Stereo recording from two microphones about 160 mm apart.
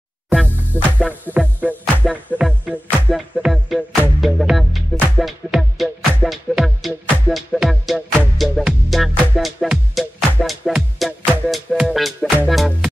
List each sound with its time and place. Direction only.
0.7 s music: 10° left (ahead or behind)
1.6 s music: 10° right (ahead or behind)